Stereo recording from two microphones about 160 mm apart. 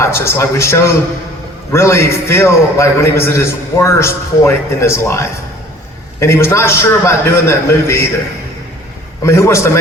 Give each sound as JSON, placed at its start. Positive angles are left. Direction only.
{"t": 0.0, "sound": "a man's voice", "side_deg": 15}
{"t": 9.2, "sound": "a man's voice", "side_deg": 15}